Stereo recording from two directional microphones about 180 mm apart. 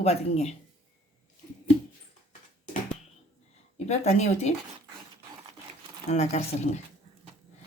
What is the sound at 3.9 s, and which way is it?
Speech, 40° left (ahead or behind).